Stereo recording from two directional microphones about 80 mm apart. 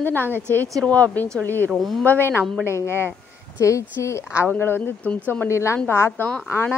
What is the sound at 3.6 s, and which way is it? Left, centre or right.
Speech, left.